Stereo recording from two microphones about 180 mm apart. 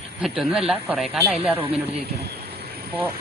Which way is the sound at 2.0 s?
65° right (ahead or behind).